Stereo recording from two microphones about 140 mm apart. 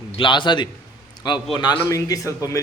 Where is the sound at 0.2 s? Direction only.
35° left (ahead or behind).